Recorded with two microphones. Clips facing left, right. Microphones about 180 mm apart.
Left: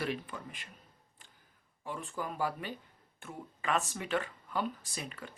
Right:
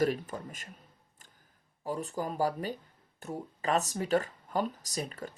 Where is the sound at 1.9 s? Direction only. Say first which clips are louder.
Right 5 dB; 40° right (ahead or behind).